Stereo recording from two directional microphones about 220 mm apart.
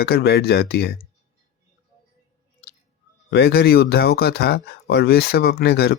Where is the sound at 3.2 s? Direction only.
45° left (ahead or behind).